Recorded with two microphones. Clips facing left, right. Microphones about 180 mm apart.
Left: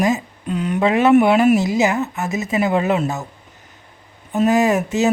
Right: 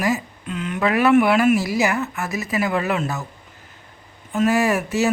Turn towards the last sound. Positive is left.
turn(degrees=20)  # may be behind; listen again after turning